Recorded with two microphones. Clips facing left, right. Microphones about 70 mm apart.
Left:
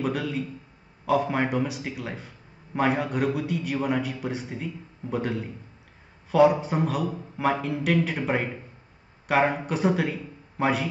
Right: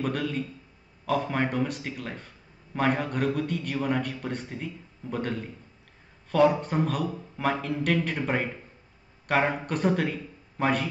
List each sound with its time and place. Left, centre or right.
0.0 s a man's voice: centre